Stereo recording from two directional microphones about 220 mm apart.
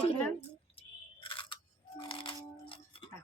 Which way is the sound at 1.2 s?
20° left (ahead or behind).